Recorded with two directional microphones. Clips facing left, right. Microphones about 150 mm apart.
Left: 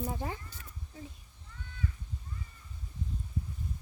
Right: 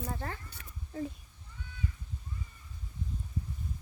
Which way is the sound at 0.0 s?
10° left (ahead or behind).